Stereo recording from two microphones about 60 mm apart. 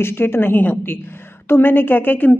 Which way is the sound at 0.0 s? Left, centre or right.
Left.